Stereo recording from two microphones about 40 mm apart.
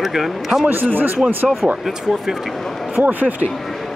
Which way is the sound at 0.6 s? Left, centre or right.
Right.